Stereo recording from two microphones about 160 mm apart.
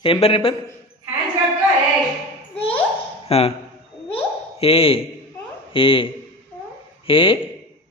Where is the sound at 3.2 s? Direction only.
40° left (ahead or behind).